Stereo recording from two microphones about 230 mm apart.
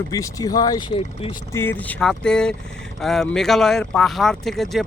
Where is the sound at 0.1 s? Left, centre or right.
Centre.